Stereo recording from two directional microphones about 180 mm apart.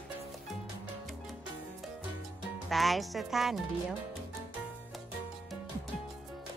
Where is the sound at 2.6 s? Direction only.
Centre (ahead or behind).